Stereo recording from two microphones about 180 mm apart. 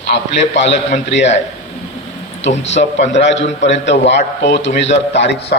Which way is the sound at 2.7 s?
40° left (ahead or behind).